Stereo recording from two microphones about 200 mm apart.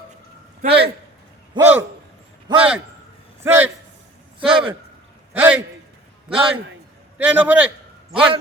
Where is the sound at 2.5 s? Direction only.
20° right (ahead or behind).